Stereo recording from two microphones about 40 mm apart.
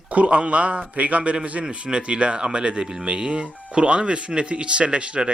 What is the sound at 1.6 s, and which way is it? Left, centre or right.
A man's voice, right.